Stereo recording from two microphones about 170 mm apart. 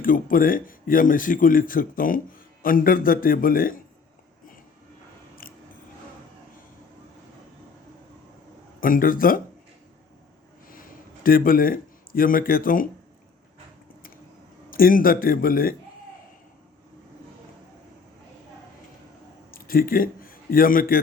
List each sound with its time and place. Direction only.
0.0 s speech: 55° left (ahead or behind)
5.4 s biting: 55° left (ahead or behind)
8.8 s speech: 55° left (ahead or behind)
11.2 s speech: 60° left (ahead or behind)
14.7 s speech: 55° left (ahead or behind)
19.5 s a man's voice: 55° left (ahead or behind)